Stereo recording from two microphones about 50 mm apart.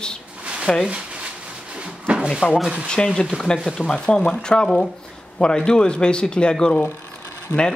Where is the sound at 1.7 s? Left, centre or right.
Right.